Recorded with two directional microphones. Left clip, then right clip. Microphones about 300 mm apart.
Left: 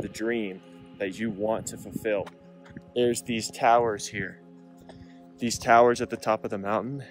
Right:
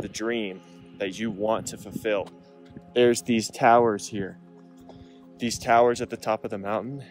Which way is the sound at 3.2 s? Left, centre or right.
Right.